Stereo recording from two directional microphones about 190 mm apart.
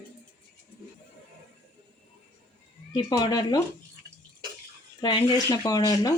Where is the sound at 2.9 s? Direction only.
20° left (ahead or behind).